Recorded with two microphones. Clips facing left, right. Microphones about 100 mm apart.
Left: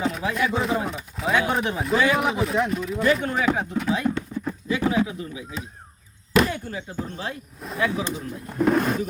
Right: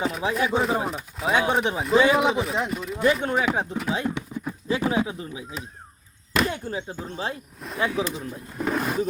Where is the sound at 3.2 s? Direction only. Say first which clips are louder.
Right 1 dB; 30° right (ahead or behind).